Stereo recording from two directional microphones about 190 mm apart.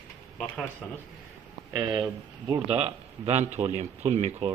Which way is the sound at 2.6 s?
35° right (ahead or behind).